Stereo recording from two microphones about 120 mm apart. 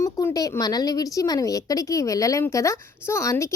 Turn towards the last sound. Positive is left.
turn(degrees=25)  # may be behind; listen again after turning